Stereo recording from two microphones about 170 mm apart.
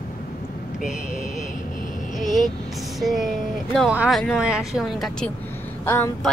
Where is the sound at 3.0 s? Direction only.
Centre (ahead or behind).